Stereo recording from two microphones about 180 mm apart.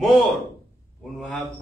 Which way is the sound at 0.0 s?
Centre (ahead or behind).